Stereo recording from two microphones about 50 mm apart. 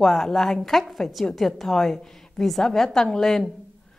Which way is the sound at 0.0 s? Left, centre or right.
Centre.